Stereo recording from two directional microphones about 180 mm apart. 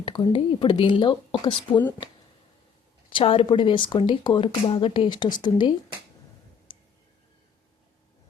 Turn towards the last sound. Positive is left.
turn(degrees=30)  # may be behind; listen again after turning